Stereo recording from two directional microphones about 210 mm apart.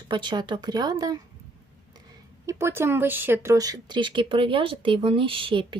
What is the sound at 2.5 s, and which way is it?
Speech, 10° right (ahead or behind).